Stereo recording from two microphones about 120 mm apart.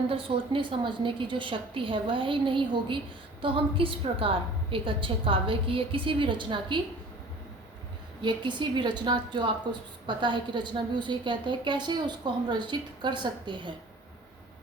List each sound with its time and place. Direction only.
0.1 s a woman's voice: 45° right (ahead or behind)
8.2 s a woman's voice: 40° right (ahead or behind)